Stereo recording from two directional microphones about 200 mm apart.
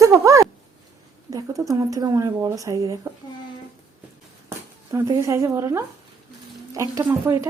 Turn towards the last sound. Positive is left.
turn(degrees=-15)  # may be behind; listen again after turning